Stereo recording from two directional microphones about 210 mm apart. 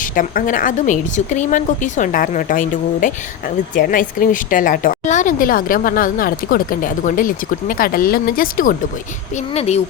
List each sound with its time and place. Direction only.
0.0 s a woman's voice: 40° left (ahead or behind)
9.6 s a woman's voice: 30° left (ahead or behind)